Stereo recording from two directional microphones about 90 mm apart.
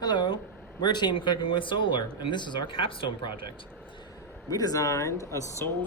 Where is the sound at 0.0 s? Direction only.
55° left (ahead or behind).